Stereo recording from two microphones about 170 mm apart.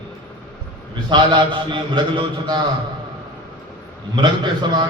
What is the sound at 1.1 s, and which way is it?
A man's voice, 25° right (ahead or behind).